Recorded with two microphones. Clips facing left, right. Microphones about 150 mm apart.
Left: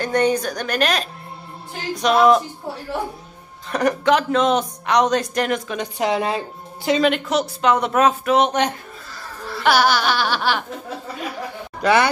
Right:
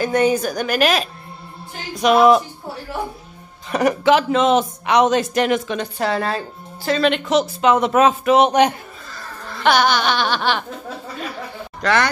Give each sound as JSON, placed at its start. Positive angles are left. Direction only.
{"t": 0.0, "sound": "a woman's voice", "side_deg": -5}
{"t": 3.7, "sound": "speech", "side_deg": -5}
{"t": 5.8, "sound": "a woman's voice", "side_deg": 15}
{"t": 7.1, "sound": "speech", "side_deg": 0}
{"t": 9.4, "sound": "speech", "side_deg": 5}
{"t": 11.8, "sound": "a woman's voice", "side_deg": 10}